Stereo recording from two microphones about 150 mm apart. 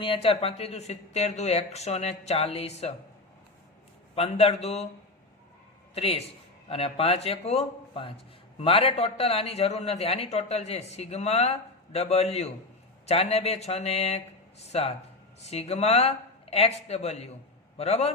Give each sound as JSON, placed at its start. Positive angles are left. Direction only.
{"t": 0.0, "sound": "a man's voice", "side_deg": 35}
{"t": 4.1, "sound": "a man's voice", "side_deg": 45}
{"t": 5.9, "sound": "a man's voice", "side_deg": 40}